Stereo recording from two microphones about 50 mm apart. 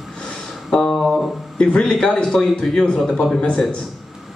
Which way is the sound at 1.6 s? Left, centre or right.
Centre.